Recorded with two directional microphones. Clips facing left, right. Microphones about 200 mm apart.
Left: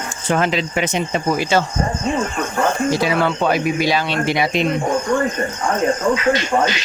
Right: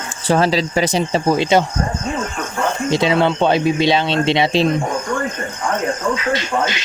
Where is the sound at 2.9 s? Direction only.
25° right (ahead or behind).